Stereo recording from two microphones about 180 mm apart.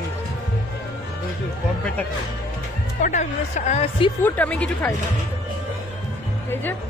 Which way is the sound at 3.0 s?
40° left (ahead or behind).